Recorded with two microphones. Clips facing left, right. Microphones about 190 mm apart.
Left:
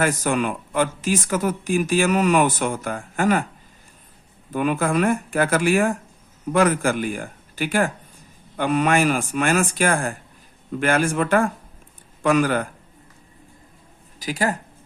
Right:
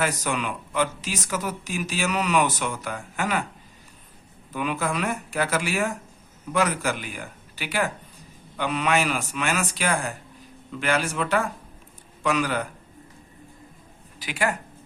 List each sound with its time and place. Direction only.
0.0 s speech: 50° left (ahead or behind)
4.5 s speech: 50° left (ahead or behind)
14.2 s speech: 40° left (ahead or behind)